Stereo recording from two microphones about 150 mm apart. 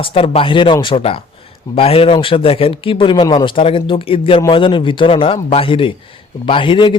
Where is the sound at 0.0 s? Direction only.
40° left (ahead or behind).